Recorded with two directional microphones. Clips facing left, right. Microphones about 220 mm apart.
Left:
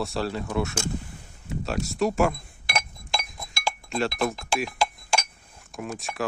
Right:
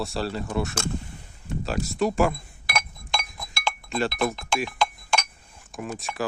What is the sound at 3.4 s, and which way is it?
Chink, centre (ahead or behind).